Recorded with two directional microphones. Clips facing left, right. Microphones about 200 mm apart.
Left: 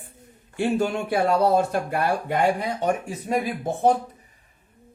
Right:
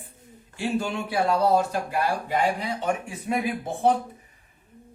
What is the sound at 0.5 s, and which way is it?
Speech, 55° left (ahead or behind).